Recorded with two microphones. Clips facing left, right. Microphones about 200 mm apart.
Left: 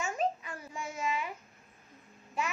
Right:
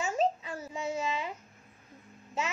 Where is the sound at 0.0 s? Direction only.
25° right (ahead or behind).